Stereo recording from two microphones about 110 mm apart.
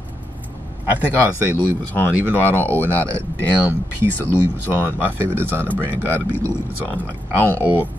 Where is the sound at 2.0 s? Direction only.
15° right (ahead or behind).